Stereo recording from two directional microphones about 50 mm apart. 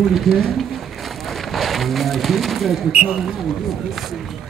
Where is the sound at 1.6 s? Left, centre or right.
Centre.